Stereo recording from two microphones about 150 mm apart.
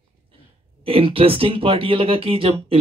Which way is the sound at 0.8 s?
35° right (ahead or behind).